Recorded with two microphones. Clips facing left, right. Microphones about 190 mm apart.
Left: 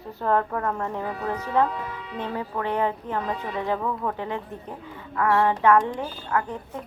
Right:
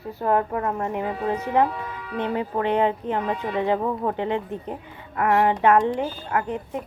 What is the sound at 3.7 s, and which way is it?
Speech, 30° right (ahead or behind).